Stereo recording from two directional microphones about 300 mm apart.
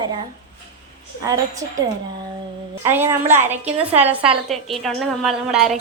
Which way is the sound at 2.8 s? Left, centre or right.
Centre.